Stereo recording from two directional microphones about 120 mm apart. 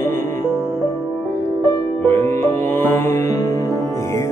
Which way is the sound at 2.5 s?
20° left (ahead or behind).